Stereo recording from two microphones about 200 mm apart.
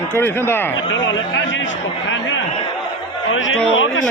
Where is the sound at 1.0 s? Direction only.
70° left (ahead or behind).